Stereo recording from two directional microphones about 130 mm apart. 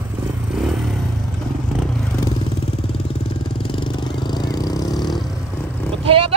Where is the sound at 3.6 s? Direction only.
40° left (ahead or behind).